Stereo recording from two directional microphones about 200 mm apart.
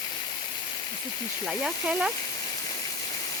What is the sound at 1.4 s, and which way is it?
Speech, 5° right (ahead or behind).